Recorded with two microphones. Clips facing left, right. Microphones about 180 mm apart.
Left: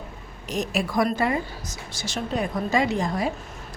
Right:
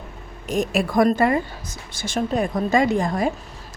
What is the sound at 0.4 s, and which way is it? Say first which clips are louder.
A woman's voice: right 5 dB; 50° right (ahead or behind).